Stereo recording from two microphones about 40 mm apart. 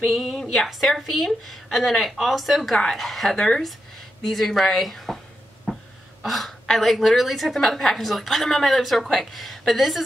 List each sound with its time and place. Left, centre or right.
0.0 s a woman's voice: centre
2.7 s a woman's voice: centre
3.0 s a woman's voice: centre
6.2 s a woman's voice: centre